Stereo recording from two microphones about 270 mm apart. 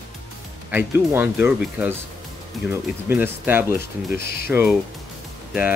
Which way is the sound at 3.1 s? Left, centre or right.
Centre.